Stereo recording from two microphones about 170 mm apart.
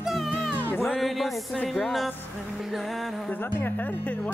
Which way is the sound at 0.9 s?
Centre (ahead or behind).